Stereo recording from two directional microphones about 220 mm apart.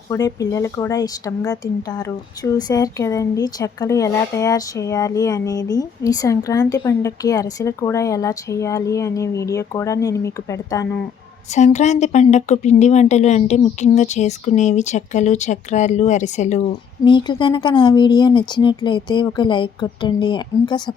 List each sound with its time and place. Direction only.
0.1 s speech: 15° left (ahead or behind)
11.5 s a woman's voice: 30° left (ahead or behind)
17.0 s speech: 20° left (ahead or behind)